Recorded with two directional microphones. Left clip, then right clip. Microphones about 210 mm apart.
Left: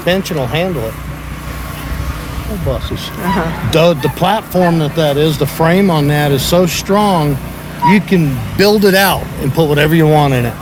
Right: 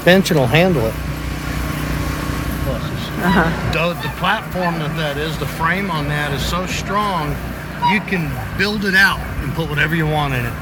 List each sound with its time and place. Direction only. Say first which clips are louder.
0.0 s speech: right 2 dB; 15° right (ahead or behind)
3.2 s speech: right 1 dB; centre (ahead or behind)
3.7 s speech: left 9 dB; 45° left (ahead or behind)